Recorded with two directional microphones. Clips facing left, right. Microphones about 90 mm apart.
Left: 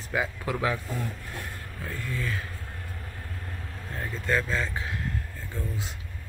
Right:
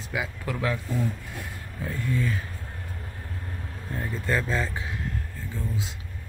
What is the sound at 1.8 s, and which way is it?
Speech, 20° right (ahead or behind).